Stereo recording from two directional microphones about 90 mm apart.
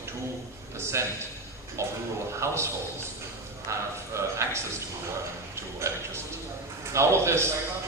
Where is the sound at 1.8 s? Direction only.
35° right (ahead or behind).